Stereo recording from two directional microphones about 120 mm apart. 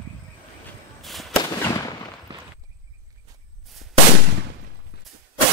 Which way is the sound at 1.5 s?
30° left (ahead or behind).